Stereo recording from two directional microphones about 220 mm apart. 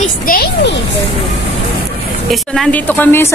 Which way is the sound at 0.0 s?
40° left (ahead or behind).